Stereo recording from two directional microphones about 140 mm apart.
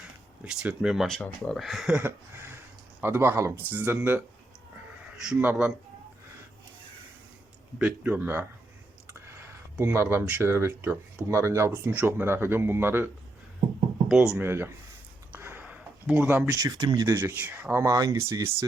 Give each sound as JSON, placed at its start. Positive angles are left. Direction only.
{"t": 0.0, "sound": "speech", "side_deg": -5}
{"t": 2.0, "sound": "a sound", "side_deg": -15}
{"t": 3.0, "sound": "speech", "side_deg": -15}
{"t": 7.8, "sound": "speech", "side_deg": -10}
{"t": 14.3, "sound": "speech", "side_deg": -15}
{"t": 15.3, "sound": "a sound", "side_deg": -15}
{"t": 16.5, "sound": "speech", "side_deg": -25}
{"t": 17.2, "sound": "speech", "side_deg": -10}